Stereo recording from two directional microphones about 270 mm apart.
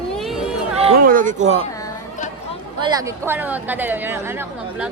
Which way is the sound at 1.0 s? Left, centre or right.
Right.